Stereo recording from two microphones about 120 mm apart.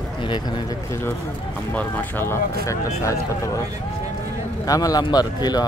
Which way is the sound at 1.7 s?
15° left (ahead or behind).